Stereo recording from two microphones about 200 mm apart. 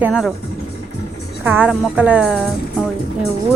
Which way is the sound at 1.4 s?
10° right (ahead or behind).